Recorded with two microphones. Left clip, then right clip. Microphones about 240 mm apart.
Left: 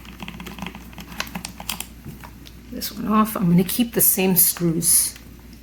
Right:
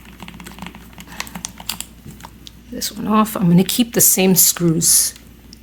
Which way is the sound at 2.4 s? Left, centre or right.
Right.